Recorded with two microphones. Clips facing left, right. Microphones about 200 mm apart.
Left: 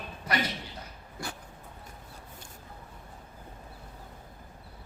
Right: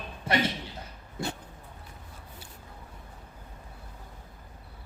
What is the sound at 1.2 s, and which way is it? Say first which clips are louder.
Dog: right 6 dB; 25° right (ahead or behind).